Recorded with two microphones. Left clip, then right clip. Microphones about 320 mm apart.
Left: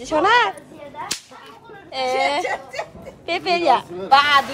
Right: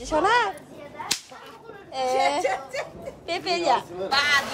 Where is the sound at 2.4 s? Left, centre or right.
Centre.